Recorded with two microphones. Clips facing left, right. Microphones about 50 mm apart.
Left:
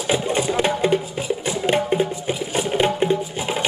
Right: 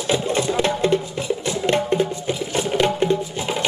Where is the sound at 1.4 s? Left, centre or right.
Centre.